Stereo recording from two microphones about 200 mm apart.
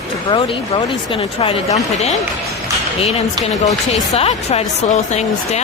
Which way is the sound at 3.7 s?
30° left (ahead or behind).